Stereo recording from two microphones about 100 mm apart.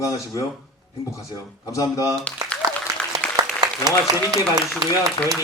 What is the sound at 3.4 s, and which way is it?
Applause, 40° right (ahead or behind).